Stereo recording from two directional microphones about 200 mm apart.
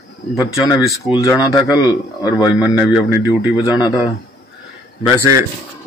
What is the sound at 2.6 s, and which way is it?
Speech, 5° right (ahead or behind).